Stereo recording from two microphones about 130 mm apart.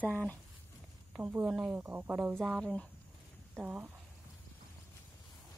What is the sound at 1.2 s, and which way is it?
Speech, 15° right (ahead or behind).